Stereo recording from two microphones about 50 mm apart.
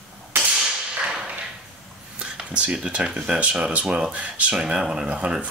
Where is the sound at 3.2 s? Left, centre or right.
Right.